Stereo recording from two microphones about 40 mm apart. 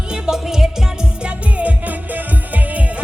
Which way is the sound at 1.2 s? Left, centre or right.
Right.